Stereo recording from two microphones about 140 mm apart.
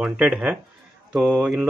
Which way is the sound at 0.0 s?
5° right (ahead or behind).